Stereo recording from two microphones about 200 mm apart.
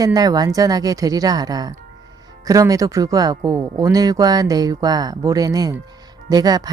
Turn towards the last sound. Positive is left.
turn(degrees=-20)  # may be behind; listen again after turning